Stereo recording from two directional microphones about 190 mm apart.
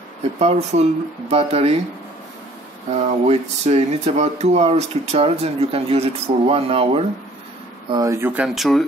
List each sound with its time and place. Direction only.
0.4 s speech: 35° right (ahead or behind)
2.9 s speech: 35° right (ahead or behind)
7.9 s speech: 15° right (ahead or behind); by 8.8 s centre (ahead or behind)